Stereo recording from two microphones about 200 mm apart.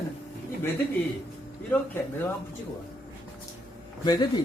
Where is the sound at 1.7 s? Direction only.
10° left (ahead or behind).